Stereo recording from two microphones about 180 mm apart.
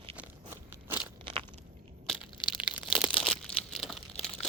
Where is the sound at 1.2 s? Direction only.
30° right (ahead or behind).